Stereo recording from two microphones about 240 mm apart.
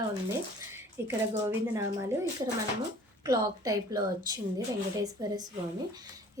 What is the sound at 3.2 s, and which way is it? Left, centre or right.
A woman's voice, centre.